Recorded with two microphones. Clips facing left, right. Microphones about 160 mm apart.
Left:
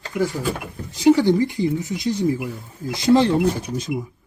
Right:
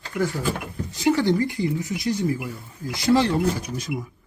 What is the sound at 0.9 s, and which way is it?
Speech, 15° left (ahead or behind).